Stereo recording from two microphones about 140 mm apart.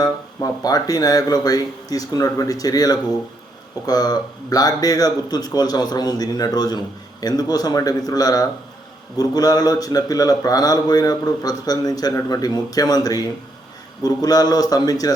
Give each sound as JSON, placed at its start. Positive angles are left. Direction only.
{"t": 0.0, "sound": "a man's voice", "side_deg": 25}